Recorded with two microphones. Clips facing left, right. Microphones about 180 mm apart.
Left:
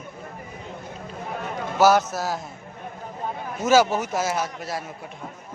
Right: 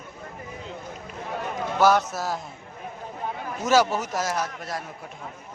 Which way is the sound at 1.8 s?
5° left (ahead or behind).